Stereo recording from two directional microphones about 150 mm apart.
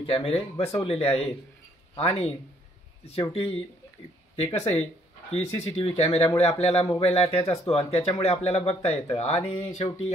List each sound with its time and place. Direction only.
0.0 s speech: 40° left (ahead or behind)